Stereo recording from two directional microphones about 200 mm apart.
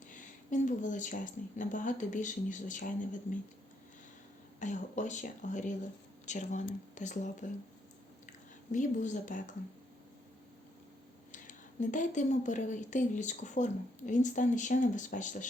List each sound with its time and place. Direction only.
0.1 s speech: 40° left (ahead or behind)
4.6 s speech: 35° left (ahead or behind)
11.3 s speech: 40° left (ahead or behind)